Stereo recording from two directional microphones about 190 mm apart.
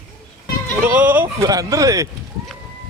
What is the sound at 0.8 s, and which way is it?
Speech, 10° right (ahead or behind).